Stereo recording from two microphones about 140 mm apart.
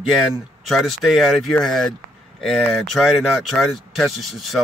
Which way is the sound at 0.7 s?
Centre (ahead or behind).